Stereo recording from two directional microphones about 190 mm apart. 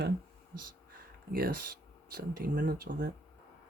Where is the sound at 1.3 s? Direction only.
50° right (ahead or behind).